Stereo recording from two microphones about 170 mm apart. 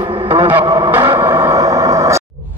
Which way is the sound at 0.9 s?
15° right (ahead or behind).